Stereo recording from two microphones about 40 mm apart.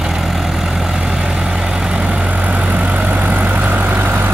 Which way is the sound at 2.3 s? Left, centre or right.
Right.